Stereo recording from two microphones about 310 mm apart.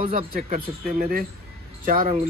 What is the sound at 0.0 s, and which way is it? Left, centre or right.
Speech, right.